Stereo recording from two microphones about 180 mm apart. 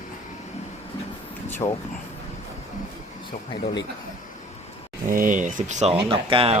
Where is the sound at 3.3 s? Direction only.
25° left (ahead or behind).